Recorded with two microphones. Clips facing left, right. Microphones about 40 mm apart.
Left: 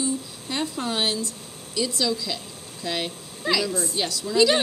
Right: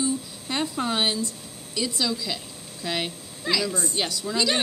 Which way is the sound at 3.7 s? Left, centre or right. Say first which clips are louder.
Left 1 dB; centre.